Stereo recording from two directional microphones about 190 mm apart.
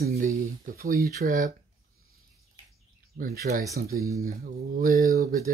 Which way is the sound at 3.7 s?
15° right (ahead or behind).